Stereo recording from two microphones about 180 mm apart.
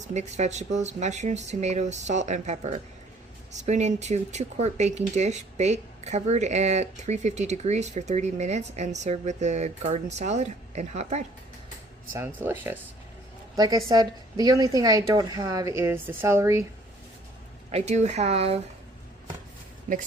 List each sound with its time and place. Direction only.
0.1 s speech: 40° right (ahead or behind)
12.1 s a woman's voice: 10° right (ahead or behind)
17.7 s speech: 35° right (ahead or behind)
19.9 s speech: 45° right (ahead or behind)